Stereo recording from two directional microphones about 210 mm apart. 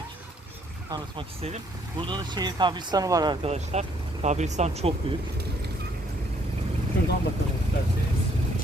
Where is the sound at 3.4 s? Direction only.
30° right (ahead or behind).